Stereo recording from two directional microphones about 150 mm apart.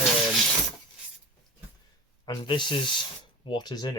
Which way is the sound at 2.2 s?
30° left (ahead or behind).